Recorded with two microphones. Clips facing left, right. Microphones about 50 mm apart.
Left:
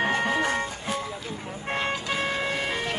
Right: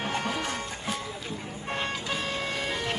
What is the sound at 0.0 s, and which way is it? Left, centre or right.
Music, left.